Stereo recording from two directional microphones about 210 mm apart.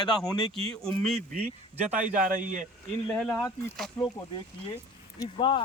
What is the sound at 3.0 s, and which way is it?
Speech, 5° left (ahead or behind).